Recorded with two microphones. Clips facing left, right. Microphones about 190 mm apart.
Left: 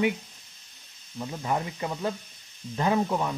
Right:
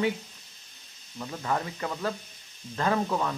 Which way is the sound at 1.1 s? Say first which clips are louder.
Left 1 dB; 15° left (ahead or behind).